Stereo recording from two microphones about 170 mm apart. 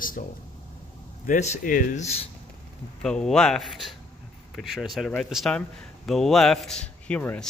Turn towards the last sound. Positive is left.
turn(degrees=10)  # may be behind; listen again after turning